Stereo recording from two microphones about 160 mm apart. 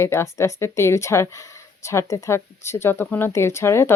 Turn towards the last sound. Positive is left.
turn(degrees=15)  # may be behind; listen again after turning